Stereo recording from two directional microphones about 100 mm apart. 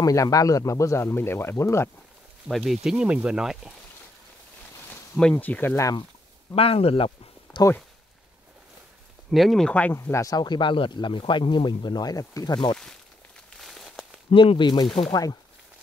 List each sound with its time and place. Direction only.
0.0 s speech: 35° left (ahead or behind)
2.4 s speech: centre (ahead or behind)
5.3 s speech: 20° left (ahead or behind)
6.5 s speech: 75° left (ahead or behind)
7.5 s speech: 45° left (ahead or behind)
9.3 s speech: centre (ahead or behind)
10.0 s speech: 30° left (ahead or behind)
10.3 s speech: 50° left (ahead or behind)
13.5 s a sound: centre (ahead or behind)
14.3 s speech: 55° left (ahead or behind); by 15.3 s 40° left (ahead or behind)